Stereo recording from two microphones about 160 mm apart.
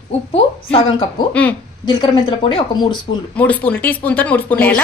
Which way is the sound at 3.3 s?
10° left (ahead or behind).